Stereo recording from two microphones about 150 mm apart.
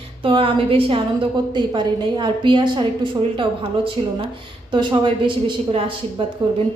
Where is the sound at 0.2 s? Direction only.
35° right (ahead or behind).